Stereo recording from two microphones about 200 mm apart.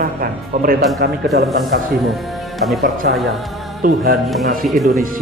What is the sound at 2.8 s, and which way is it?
Speech, 50° right (ahead or behind).